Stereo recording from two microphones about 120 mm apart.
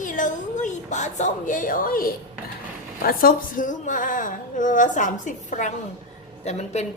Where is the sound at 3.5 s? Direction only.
90° left.